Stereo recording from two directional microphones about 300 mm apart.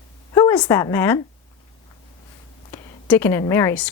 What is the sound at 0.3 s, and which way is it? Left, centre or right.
Speech, centre.